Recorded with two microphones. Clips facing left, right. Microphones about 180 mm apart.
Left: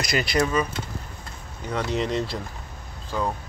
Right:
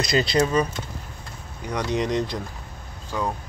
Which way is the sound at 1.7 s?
15° right (ahead or behind).